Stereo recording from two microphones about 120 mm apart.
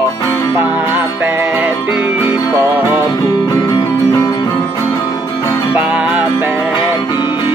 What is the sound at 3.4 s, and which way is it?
Music, 40° left (ahead or behind).